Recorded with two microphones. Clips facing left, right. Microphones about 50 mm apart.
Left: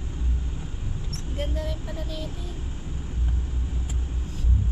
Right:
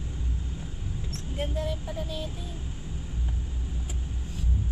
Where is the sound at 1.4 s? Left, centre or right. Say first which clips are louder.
Right 1 dB; centre.